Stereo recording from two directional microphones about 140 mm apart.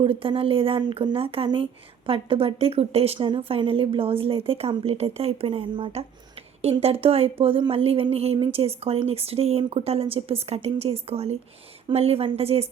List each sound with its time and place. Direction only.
0.0 s a woman's voice: 40° right (ahead or behind)